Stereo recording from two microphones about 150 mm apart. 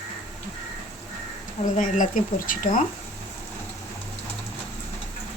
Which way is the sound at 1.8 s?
60° left (ahead or behind).